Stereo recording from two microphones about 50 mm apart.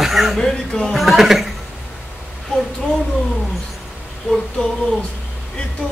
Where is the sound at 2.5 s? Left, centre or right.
Centre.